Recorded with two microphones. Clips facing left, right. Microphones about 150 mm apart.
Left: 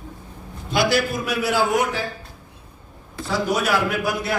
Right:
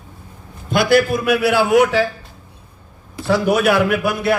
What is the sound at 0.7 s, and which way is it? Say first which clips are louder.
A man's voice: right 6 dB; 55° right (ahead or behind).